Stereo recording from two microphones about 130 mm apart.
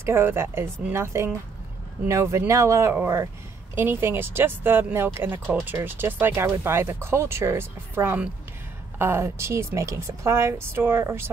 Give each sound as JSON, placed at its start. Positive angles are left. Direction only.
{"t": 0.0, "sound": "a woman's voice", "side_deg": -20}